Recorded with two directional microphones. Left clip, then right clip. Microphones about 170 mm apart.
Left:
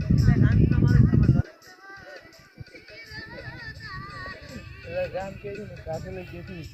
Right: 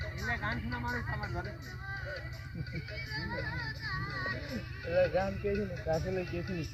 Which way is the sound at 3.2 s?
50° right (ahead or behind).